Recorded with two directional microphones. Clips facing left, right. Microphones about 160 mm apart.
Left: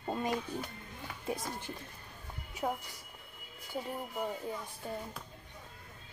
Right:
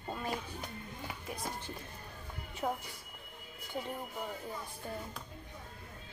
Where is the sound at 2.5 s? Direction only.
5° left (ahead or behind).